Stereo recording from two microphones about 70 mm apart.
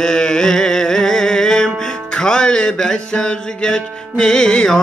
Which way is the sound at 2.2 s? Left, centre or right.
Centre.